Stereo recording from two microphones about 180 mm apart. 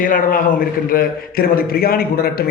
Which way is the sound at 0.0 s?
50° left (ahead or behind).